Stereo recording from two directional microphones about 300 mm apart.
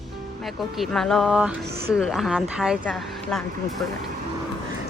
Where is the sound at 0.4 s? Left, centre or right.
Centre.